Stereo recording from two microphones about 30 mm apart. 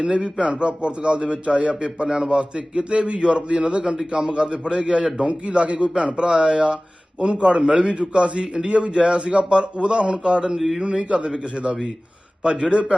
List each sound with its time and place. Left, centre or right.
0.0 s a man's voice: right
0.5 s a man's voice: right
5.3 s a man's voice: right
6.2 s a man's voice: right